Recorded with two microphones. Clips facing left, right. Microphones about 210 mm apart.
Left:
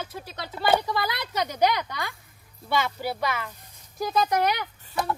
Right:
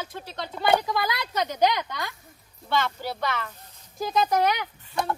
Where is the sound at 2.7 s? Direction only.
10° left (ahead or behind).